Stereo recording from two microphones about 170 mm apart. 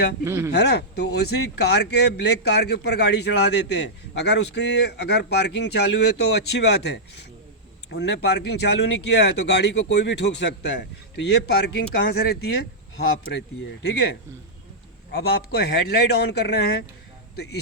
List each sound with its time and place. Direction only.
0.3 s speech: 15° right (ahead or behind)
0.5 s a man's voice: 80° left
13.8 s a man's voice: 75° left (ahead or behind)